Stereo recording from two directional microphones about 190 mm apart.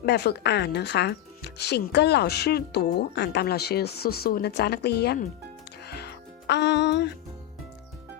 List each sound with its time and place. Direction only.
0.0 s speech: 60° left (ahead or behind)
5.8 s music: 60° left (ahead or behind)